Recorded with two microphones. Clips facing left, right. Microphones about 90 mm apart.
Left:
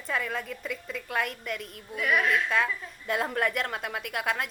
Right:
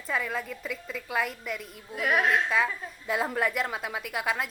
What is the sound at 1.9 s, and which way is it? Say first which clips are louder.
Speech: right 1 dB; 40° right (ahead or behind).